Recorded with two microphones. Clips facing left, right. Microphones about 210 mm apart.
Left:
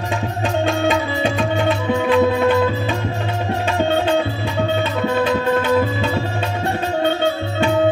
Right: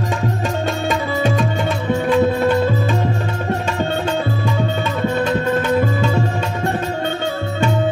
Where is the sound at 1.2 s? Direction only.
45° right (ahead or behind).